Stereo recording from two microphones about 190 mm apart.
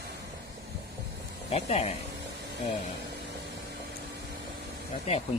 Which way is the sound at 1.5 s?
35° left (ahead or behind).